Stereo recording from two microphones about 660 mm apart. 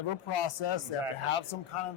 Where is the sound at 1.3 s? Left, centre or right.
Left.